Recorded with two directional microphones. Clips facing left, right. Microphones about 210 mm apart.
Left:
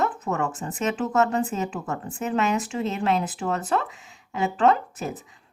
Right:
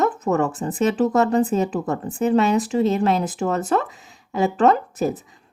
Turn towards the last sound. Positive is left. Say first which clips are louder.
# right 4 dB
turn(degrees=-40)  # may be behind; listen again after turning